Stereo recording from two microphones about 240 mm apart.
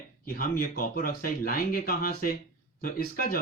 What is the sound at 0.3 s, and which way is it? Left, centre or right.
Speech, left.